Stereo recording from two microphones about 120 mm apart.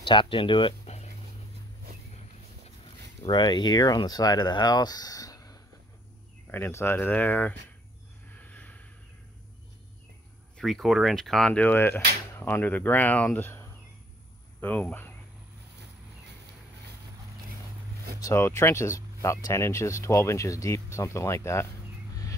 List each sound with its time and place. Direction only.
0.0 s speech: 45° left (ahead or behind)
3.3 s speech: 40° left (ahead or behind)
6.5 s speech: 20° left (ahead or behind)
8.4 s a sound: 15° left (ahead or behind)
10.6 s speech: centre (ahead or behind)
18.2 s speech: 20° left (ahead or behind)